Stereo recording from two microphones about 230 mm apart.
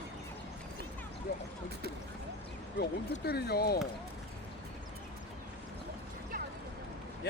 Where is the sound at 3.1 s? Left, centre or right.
Left.